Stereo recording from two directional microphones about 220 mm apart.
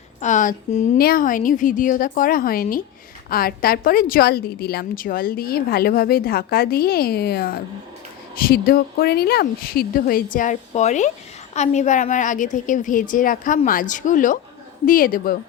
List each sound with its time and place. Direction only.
0.2 s a woman's voice: 35° left (ahead or behind)